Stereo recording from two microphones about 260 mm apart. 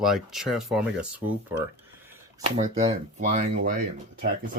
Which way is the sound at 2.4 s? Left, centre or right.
Right.